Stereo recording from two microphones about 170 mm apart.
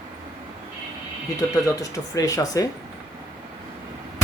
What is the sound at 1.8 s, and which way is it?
Speech, 20° left (ahead or behind).